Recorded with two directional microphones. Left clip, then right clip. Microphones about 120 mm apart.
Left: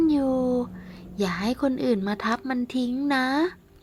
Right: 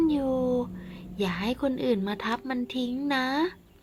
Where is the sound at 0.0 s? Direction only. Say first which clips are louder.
Left 3 dB; 35° left (ahead or behind).